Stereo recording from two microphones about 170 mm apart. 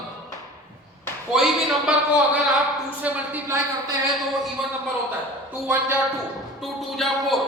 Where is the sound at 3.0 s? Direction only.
15° right (ahead or behind).